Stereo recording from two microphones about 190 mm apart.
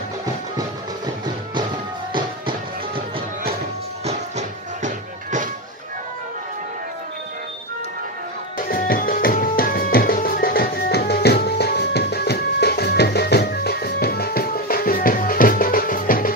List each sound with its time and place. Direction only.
4.0 s music: 35° right (ahead or behind)
8.5 s music: 50° left (ahead or behind)